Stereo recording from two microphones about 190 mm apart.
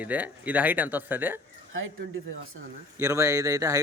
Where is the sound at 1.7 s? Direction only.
90° right.